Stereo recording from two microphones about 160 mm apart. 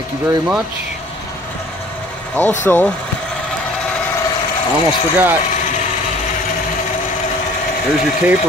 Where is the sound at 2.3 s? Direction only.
10° left (ahead or behind).